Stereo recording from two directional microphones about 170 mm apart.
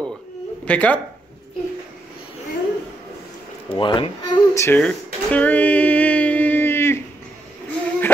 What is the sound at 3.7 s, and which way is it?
Speech, 30° left (ahead or behind).